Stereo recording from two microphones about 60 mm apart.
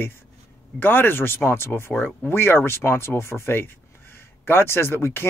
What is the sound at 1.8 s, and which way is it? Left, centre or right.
Speech, left.